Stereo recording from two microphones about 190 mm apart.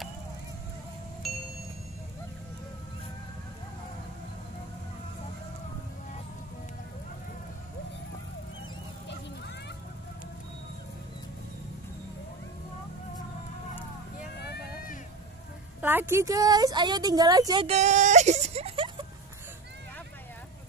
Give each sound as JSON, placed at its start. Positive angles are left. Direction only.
{"t": 1.2, "sound": "music", "side_deg": 0}
{"t": 14.5, "sound": "a sound", "side_deg": 50}
{"t": 15.8, "sound": "a woman's voice", "side_deg": -10}
{"t": 17.6, "sound": "whimper", "side_deg": -35}